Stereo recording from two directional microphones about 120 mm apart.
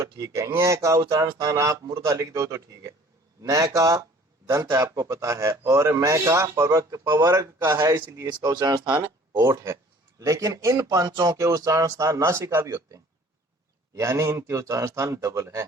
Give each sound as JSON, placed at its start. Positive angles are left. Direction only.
{"t": 0.2, "sound": "a man's voice", "side_deg": -25}
{"t": 8.3, "sound": "a man's voice", "side_deg": -35}